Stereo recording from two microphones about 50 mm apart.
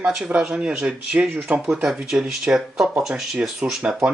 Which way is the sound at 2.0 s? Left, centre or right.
Centre.